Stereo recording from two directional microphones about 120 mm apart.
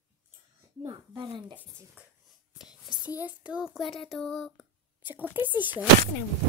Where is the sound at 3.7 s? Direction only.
Centre (ahead or behind).